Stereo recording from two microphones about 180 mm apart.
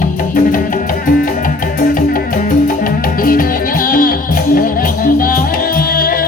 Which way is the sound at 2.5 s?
50° left (ahead or behind).